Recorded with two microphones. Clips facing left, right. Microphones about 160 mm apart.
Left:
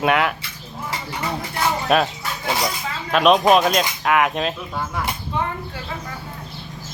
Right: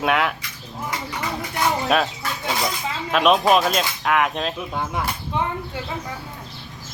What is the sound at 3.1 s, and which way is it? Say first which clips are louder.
Speech: left 2 dB; centre (ahead or behind).